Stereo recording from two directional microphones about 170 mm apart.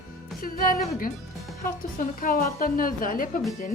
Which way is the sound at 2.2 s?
55° left (ahead or behind).